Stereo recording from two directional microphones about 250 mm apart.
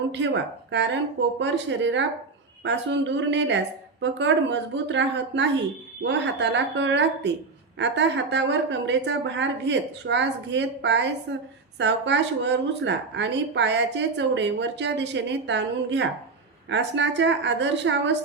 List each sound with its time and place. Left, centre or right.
0.1 s a woman's voice: right